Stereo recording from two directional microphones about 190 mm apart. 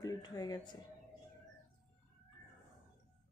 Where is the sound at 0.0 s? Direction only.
20° left (ahead or behind).